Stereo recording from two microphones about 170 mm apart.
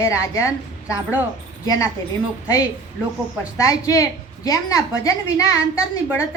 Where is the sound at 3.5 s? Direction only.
20° left (ahead or behind).